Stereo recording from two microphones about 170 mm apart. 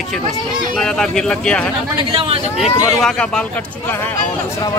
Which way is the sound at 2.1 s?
30° right (ahead or behind).